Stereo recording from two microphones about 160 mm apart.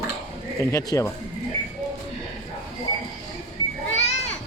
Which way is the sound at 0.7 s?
20° left (ahead or behind).